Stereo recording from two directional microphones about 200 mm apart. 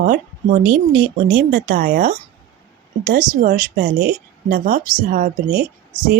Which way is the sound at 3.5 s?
45° right (ahead or behind).